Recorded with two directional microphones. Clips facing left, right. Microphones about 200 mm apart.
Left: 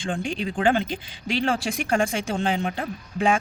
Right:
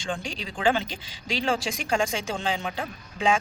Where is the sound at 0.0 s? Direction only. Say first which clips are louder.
Left 5 dB; 55° left (ahead or behind).